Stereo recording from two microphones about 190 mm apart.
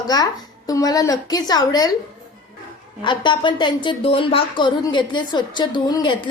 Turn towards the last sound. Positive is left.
turn(degrees=25)  # may be behind; listen again after turning